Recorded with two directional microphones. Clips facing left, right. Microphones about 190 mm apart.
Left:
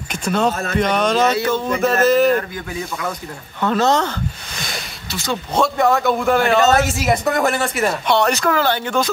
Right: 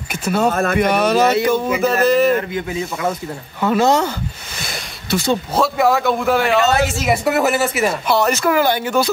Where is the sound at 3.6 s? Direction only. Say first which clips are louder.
Right 2 dB; 10° right (ahead or behind).